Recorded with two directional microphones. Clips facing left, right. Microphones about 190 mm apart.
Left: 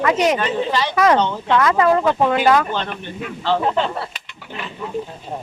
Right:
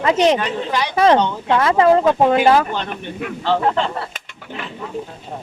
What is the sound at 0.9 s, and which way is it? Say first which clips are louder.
Speech: right 3 dB; 30° right (ahead or behind).